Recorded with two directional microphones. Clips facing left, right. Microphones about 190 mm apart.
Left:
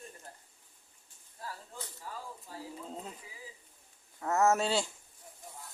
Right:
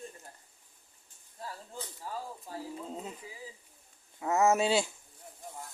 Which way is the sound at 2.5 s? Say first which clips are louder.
Right 6 dB; 45° right (ahead or behind).